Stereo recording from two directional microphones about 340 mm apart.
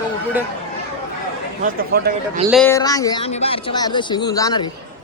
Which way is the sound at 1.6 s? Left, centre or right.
Right.